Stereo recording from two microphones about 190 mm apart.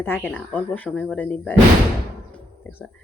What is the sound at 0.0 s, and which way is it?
Speech, 10° left (ahead or behind).